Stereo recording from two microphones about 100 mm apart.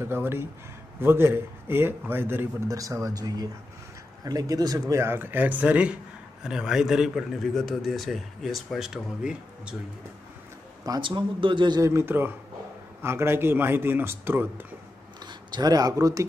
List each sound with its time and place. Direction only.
0.0 s speech: 25° right (ahead or behind)
2.7 s a man's voice: 35° right (ahead or behind); by 9.8 s 10° right (ahead or behind)
11.0 s a man's voice: 55° right (ahead or behind)
11.8 s speech: 25° right (ahead or behind)
15.2 s speech: 45° right (ahead or behind)